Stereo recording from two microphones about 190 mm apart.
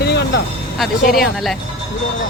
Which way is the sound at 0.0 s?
60° left (ahead or behind).